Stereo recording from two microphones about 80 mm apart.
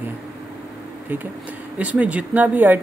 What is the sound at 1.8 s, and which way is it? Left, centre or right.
Speech, centre.